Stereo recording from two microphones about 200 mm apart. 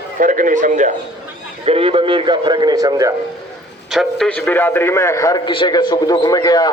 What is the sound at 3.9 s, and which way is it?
A man's voice, centre (ahead or behind).